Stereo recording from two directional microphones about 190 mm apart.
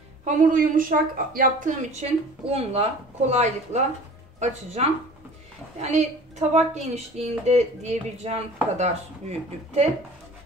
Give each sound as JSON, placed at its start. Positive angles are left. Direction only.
{"t": 0.2, "sound": "a woman's voice", "side_deg": -40}